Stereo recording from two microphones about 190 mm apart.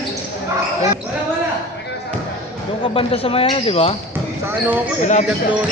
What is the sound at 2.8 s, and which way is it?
Speech, 30° left (ahead or behind).